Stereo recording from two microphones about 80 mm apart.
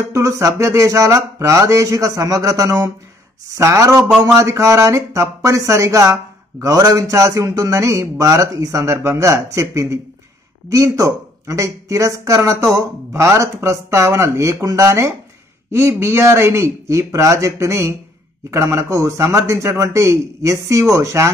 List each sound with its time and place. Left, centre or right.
0.1 s speech: right